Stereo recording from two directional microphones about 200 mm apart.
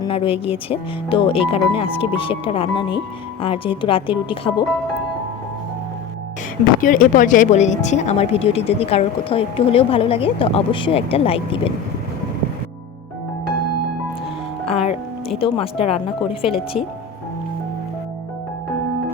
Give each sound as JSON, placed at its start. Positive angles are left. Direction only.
{"t": 0.0, "sound": "speech", "side_deg": 30}
{"t": 6.8, "sound": "speech", "side_deg": 40}
{"t": 14.7, "sound": "music", "side_deg": 30}
{"t": 15.4, "sound": "speech", "side_deg": 25}